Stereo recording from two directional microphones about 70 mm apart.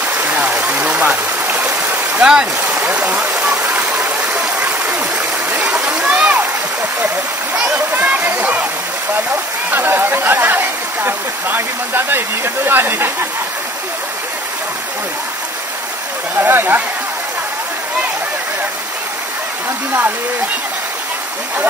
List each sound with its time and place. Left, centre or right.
0.0 s a sound: right
0.4 s stream: centre
3.9 s a sound: centre
4.8 s stream: centre
7.5 s speech: centre
7.9 s speech: right
9.7 s speech: right
16.3 s speech: right